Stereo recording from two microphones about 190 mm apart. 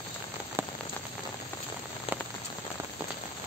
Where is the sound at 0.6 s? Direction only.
15° right (ahead or behind).